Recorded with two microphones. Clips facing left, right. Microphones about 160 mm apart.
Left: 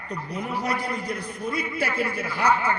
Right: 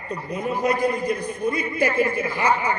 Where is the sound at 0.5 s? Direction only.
50° right (ahead or behind).